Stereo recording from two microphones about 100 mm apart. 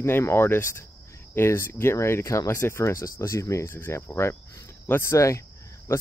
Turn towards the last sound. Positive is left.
turn(degrees=25)  # may be behind; listen again after turning